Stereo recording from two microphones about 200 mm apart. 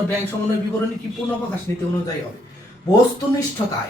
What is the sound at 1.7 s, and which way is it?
Speech, 10° left (ahead or behind).